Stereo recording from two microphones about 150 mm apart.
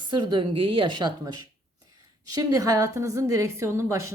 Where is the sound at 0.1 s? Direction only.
30° right (ahead or behind).